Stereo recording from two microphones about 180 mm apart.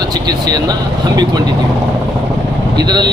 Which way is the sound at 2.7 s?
25° right (ahead or behind).